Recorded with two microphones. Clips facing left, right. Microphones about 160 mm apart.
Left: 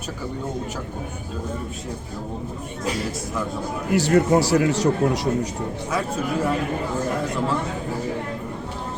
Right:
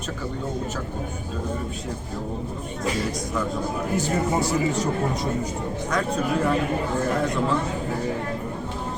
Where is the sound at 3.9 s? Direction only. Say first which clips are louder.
Left 8 dB; 75° left (ahead or behind).